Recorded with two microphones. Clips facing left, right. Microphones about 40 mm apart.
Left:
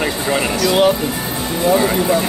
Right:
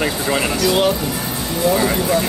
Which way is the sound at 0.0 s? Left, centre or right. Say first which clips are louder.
Left 1 dB; centre.